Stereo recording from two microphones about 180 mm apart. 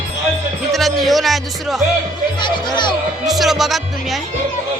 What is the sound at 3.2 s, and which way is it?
Speech, centre (ahead or behind).